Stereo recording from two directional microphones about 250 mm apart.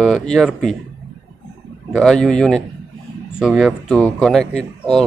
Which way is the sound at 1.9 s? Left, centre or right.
Centre.